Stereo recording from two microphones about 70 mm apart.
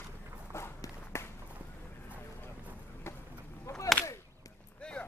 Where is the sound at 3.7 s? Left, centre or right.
Left.